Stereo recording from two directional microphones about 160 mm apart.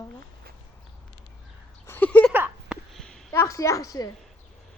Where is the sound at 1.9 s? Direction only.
10° left (ahead or behind).